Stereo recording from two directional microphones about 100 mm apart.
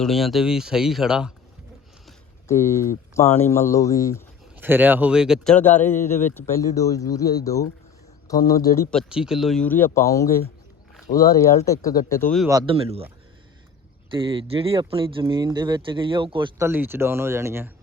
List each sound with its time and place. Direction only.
0.0 s speech: centre (ahead or behind)
2.5 s speech: 30° left (ahead or behind)
4.6 s speech: 20° right (ahead or behind)
5.5 s speech: 15° left (ahead or behind)
6.6 s speech: 35° left (ahead or behind)
9.0 s speech: 5° right (ahead or behind)
9.6 s speech: 20° left (ahead or behind); by 12.2 s 35° left (ahead or behind)
12.6 s speech: 70° right (ahead or behind)
14.1 s speech: 60° right (ahead or behind)
16.6 s speech: 25° right (ahead or behind)